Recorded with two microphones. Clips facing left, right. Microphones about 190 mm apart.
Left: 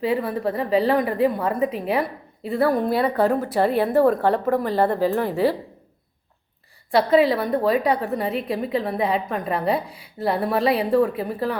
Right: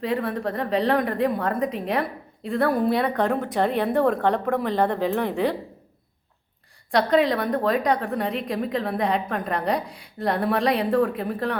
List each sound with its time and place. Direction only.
0.0 s a woman's voice: 5° left (ahead or behind)
6.9 s a woman's voice: 5° left (ahead or behind)